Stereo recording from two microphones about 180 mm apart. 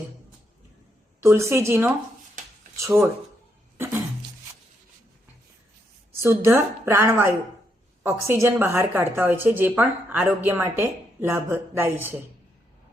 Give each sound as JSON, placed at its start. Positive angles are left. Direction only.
{"t": 1.2, "sound": "a woman's voice", "side_deg": -15}
{"t": 6.2, "sound": "a woman's voice", "side_deg": -15}